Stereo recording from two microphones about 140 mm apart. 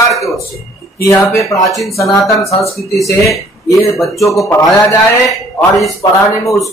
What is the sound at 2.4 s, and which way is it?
Speech, 20° left (ahead or behind).